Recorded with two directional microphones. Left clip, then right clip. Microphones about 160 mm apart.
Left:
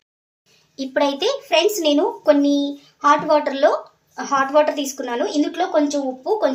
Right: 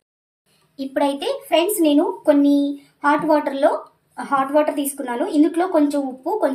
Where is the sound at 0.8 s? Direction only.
25° left (ahead or behind).